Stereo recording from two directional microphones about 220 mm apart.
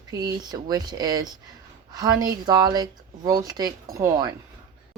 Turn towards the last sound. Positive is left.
turn(degrees=-15)  # may be behind; listen again after turning